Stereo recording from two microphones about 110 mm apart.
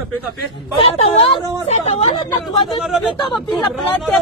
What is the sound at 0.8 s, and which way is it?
Speech, 60° left (ahead or behind).